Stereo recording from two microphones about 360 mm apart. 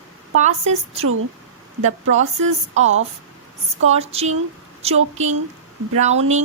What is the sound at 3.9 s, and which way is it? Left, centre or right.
Speech, centre.